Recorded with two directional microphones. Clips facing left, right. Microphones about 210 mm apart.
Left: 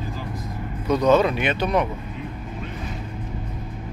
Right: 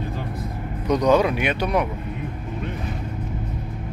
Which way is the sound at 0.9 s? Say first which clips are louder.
Even; 15° right (ahead or behind).